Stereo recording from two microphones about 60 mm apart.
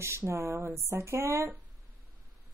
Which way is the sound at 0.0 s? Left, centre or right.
Right.